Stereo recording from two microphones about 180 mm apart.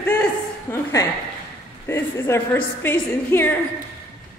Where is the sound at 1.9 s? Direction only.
15° left (ahead or behind).